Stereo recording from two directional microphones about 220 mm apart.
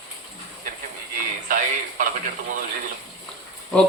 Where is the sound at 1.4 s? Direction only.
40° right (ahead or behind).